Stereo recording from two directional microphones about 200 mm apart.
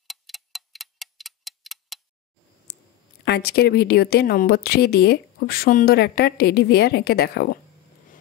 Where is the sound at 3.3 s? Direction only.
55° left (ahead or behind).